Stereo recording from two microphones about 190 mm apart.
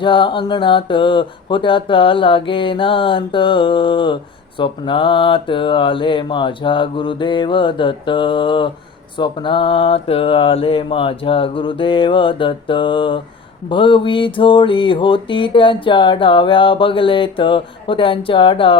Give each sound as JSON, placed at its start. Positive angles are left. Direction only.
{"t": 0.0, "sound": "mantra", "side_deg": 25}